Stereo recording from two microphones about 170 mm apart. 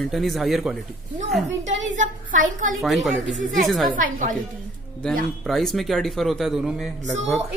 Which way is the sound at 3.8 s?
55° right (ahead or behind).